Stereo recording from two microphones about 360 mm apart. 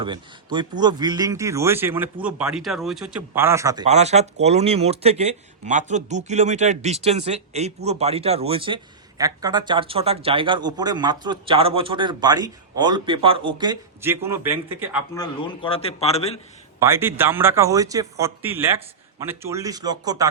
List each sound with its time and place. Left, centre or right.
0.0 s speech: centre
15.1 s a man's voice: centre
16.8 s speech: centre